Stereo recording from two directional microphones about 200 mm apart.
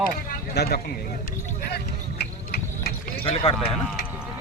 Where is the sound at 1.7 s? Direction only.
55° left (ahead or behind).